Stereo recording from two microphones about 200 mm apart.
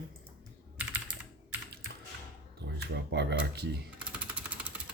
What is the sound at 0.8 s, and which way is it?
Computer keyboard, 10° right (ahead or behind).